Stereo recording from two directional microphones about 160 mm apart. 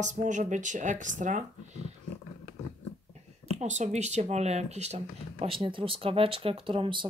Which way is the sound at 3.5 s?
45° right (ahead or behind).